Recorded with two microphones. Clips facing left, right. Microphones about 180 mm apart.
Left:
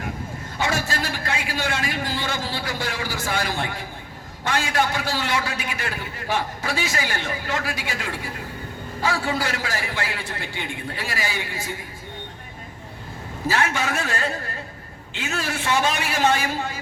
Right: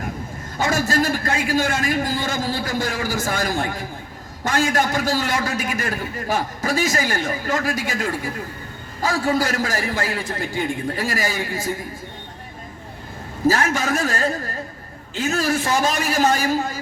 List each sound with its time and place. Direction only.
0.6 s a man's voice: 45° right (ahead or behind)
13.5 s a man's voice: 40° right (ahead or behind)